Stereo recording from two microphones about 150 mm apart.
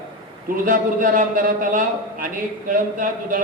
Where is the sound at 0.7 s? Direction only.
65° right (ahead or behind).